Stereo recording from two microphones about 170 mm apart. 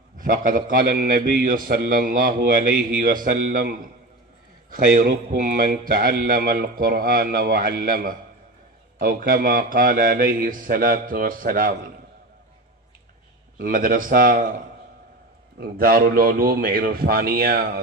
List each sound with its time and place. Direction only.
0.2 s speech: 50° right (ahead or behind)
4.6 s speech: 55° right (ahead or behind)
13.6 s speech: 55° right (ahead or behind)
15.6 s speech: 60° right (ahead or behind)